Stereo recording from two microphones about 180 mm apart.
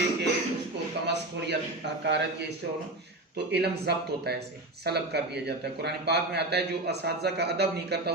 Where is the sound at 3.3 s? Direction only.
65° right (ahead or behind).